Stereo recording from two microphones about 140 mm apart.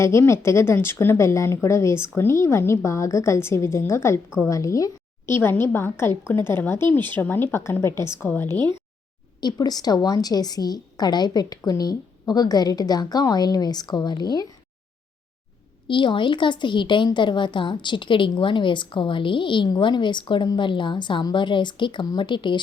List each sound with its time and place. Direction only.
0.0 s a woman's voice: 20° left (ahead or behind)
9.4 s a woman's voice: 30° left (ahead or behind)
15.9 s a woman's voice: 35° left (ahead or behind)